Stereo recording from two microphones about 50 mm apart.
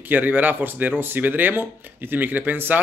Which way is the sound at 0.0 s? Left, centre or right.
Right.